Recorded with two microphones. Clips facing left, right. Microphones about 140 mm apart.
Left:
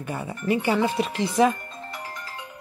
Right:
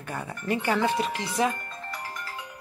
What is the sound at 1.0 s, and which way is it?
Speech, 25° left (ahead or behind).